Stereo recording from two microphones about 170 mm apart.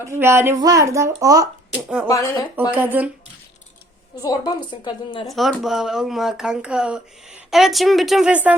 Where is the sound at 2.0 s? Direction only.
20° left (ahead or behind).